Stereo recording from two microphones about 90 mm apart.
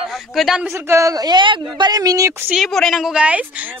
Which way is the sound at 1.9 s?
40° right (ahead or behind).